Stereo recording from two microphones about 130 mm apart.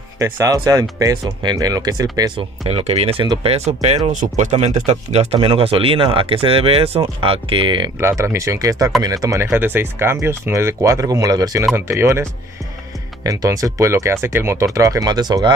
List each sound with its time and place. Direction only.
0.2 s speech: 25° right (ahead or behind)
2.6 s speech: 55° right (ahead or behind)
4.1 s speech: 75° right (ahead or behind); by 7.9 s 40° right (ahead or behind)
8.0 s speech: 20° right (ahead or behind)